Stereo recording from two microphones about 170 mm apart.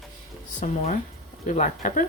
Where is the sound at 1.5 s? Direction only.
45° left (ahead or behind).